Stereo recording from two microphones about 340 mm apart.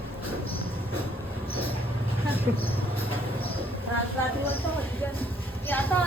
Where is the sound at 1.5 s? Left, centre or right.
Centre.